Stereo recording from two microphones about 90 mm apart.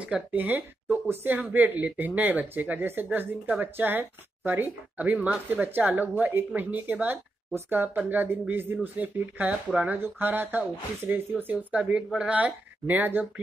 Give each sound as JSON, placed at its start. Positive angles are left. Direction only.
{"t": 0.0, "sound": "speech", "side_deg": -15}
{"t": 9.9, "sound": "speech", "side_deg": -25}